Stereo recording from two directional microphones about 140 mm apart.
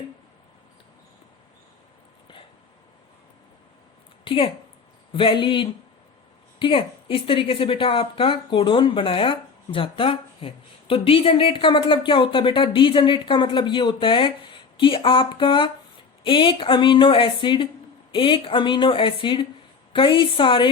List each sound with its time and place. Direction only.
4.2 s a woman's voice: 35° left (ahead or behind)